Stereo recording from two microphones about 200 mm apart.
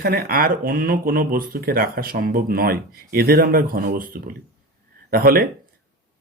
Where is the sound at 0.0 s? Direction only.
45° right (ahead or behind).